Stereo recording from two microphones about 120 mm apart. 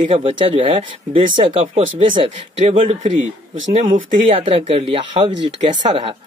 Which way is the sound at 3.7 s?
90° right.